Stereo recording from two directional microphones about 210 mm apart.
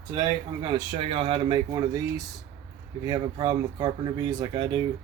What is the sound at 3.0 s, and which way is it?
Speech, 20° right (ahead or behind).